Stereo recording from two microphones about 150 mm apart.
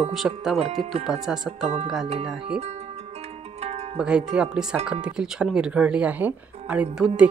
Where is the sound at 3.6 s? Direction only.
45° right (ahead or behind).